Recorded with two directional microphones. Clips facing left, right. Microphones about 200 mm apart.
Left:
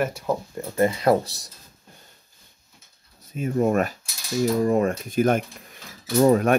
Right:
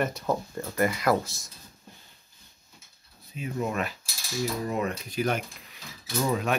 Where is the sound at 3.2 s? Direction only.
45° left (ahead or behind).